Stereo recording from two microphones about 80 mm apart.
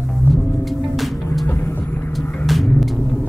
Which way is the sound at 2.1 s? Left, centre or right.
Centre.